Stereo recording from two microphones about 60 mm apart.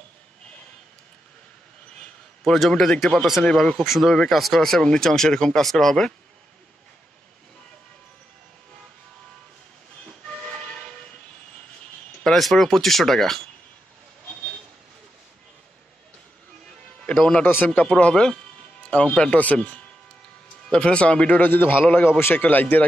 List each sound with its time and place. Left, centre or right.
2.0 s a sound: centre
2.7 s speech: centre
3.7 s speech: centre
10.2 s train: centre
12.2 s speech: centre
17.0 s music: centre
17.6 s speech: left
20.7 s speech: centre
21.4 s a man's voice: left